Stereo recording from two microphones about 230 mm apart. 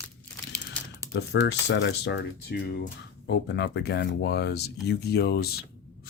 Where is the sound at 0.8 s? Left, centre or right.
Centre.